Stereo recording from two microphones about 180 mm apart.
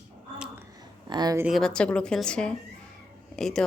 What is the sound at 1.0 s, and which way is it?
Speech, 25° right (ahead or behind).